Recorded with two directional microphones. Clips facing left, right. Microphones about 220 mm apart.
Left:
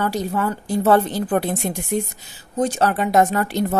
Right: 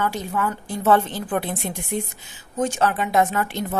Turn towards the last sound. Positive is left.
turn(degrees=40)  # may be behind; listen again after turning